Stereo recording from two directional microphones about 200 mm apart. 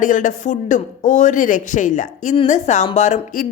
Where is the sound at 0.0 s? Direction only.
40° left (ahead or behind).